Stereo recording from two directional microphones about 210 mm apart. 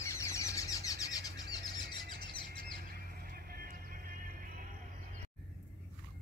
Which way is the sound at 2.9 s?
45° right (ahead or behind).